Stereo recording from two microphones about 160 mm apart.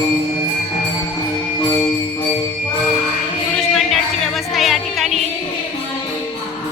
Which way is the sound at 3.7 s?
Centre (ahead or behind).